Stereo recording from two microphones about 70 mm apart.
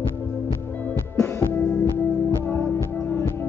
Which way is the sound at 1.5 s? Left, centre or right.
Left.